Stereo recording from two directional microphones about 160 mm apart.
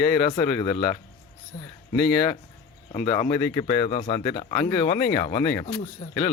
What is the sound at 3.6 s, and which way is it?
Speech, 35° left (ahead or behind).